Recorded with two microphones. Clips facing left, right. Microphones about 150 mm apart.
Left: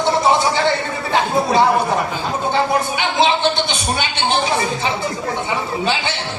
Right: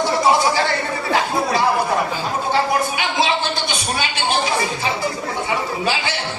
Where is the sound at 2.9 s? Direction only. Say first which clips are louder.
Left 3 dB; 25° left (ahead or behind).